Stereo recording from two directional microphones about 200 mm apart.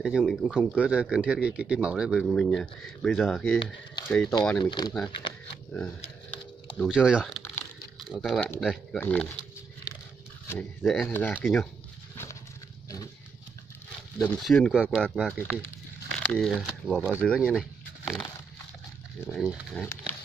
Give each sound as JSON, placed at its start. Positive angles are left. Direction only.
{"t": 0.0, "sound": "speech", "side_deg": 0}
{"t": 0.7, "sound": "speech", "side_deg": -5}
{"t": 4.6, "sound": "speech", "side_deg": 20}
{"t": 6.8, "sound": "speech", "side_deg": -5}
{"t": 10.5, "sound": "speech", "side_deg": 10}
{"t": 11.3, "sound": "speech", "side_deg": 0}
{"t": 14.2, "sound": "speech", "side_deg": 5}
{"t": 19.2, "sound": "speech", "side_deg": 0}